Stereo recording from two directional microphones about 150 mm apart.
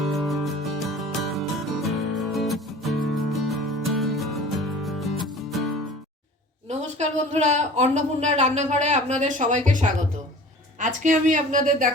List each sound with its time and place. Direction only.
0.0 s music: centre (ahead or behind)
6.7 s a woman's voice: 50° right (ahead or behind)